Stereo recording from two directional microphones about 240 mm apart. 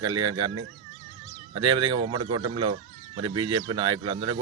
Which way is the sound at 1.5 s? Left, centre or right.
Centre.